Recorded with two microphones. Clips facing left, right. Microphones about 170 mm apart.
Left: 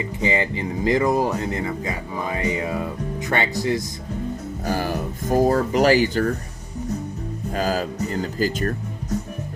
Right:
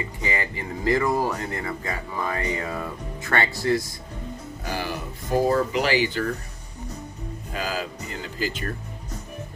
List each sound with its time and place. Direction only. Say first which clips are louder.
0.0 s speech: left 6 dB; 20° left (ahead or behind)
4.6 s speech: left 6 dB; 45° left (ahead or behind)
7.5 s speech: left 6 dB; 45° left (ahead or behind)